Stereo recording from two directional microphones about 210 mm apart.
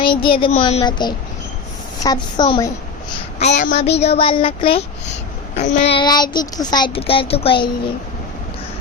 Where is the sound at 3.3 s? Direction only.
35° left (ahead or behind).